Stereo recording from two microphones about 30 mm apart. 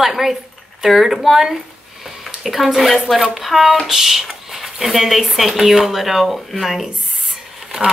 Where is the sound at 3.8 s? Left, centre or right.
Centre.